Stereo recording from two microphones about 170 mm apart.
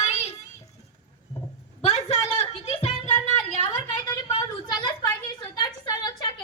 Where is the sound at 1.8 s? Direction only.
40° left (ahead or behind).